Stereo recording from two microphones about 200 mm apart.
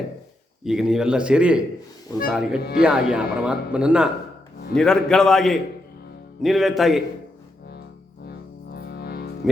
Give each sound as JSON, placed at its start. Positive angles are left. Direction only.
{"t": 0.6, "sound": "a man's voice", "side_deg": 0}
{"t": 8.2, "sound": "music", "side_deg": 55}